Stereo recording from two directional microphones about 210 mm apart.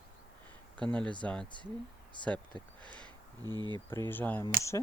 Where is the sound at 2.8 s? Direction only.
5° left (ahead or behind).